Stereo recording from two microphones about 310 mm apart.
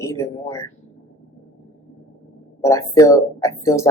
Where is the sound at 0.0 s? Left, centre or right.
Centre.